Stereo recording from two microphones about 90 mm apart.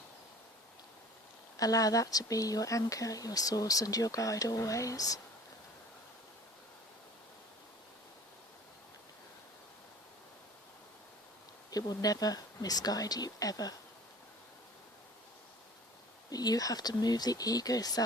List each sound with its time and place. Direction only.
1.5 s speech: 40° left (ahead or behind)
11.7 s speech: 45° left (ahead or behind)
16.3 s speech: 45° left (ahead or behind)